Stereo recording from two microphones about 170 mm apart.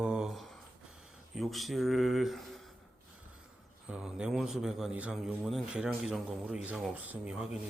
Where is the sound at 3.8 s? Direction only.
5° right (ahead or behind).